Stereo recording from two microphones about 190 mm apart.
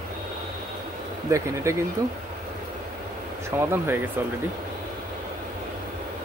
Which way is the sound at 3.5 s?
10° right (ahead or behind).